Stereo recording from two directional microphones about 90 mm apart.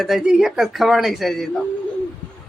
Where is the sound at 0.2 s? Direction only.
10° right (ahead or behind).